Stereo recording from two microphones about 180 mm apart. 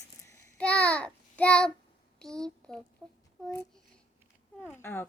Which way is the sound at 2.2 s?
5° left (ahead or behind).